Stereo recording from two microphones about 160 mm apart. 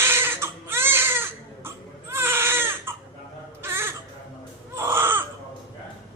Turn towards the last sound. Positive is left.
turn(degrees=-15)  # may be behind; listen again after turning